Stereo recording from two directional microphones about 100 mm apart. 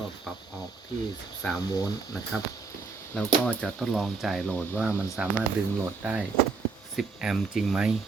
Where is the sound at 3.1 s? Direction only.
5° left (ahead or behind).